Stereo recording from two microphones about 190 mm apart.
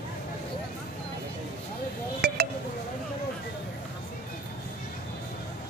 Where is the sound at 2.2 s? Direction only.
55° right (ahead or behind).